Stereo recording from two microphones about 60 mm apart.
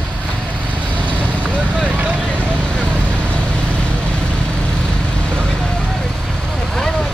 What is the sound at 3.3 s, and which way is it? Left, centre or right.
Vehicle, centre.